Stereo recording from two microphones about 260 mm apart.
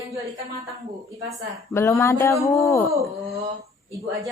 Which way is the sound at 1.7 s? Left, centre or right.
Centre.